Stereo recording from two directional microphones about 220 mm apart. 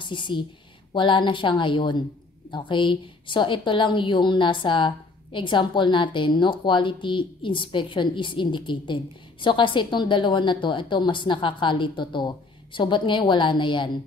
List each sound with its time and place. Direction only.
0.0 s a woman's voice: 20° left (ahead or behind)